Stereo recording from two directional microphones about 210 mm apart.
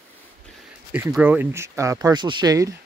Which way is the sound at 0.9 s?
10° right (ahead or behind).